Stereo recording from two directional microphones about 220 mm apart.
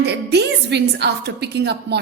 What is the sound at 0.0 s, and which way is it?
A woman's voice, 50° right (ahead or behind).